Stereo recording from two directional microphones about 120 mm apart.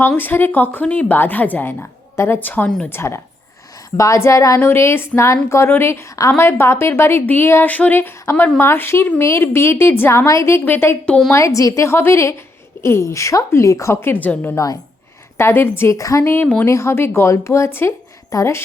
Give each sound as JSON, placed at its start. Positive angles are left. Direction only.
{"t": 0.2, "sound": "speech", "side_deg": 15}
{"t": 2.9, "sound": "speech", "side_deg": 20}
{"t": 11.3, "sound": "speech", "side_deg": 25}